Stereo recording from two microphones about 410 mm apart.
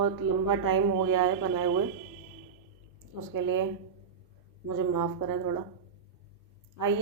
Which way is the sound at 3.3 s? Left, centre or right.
Right.